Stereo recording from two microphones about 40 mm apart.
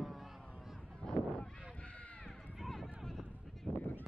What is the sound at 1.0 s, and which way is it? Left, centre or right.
Honk, left.